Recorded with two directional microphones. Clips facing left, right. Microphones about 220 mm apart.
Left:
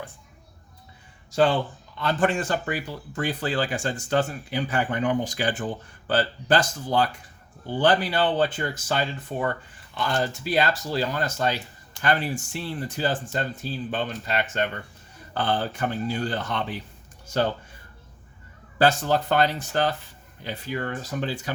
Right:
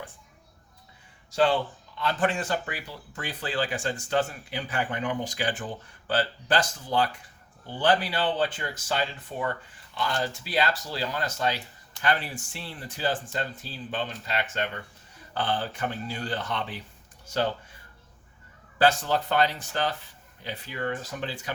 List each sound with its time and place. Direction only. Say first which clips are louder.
1.3 s speech: left 2 dB; 50° left (ahead or behind)
18.8 s speech: left 2 dB; 45° left (ahead or behind)